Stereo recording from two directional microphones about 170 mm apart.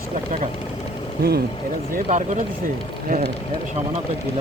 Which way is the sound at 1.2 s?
70° right (ahead or behind).